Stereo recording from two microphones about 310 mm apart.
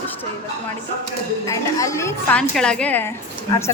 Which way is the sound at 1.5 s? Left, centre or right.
Centre.